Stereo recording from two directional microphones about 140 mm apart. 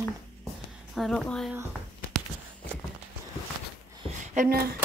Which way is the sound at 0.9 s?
Centre (ahead or behind).